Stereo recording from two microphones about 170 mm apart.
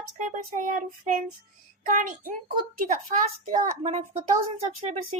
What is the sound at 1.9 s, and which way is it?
A child's voice, 50° right (ahead or behind).